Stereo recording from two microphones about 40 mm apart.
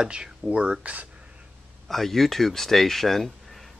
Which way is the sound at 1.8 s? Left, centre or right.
Centre.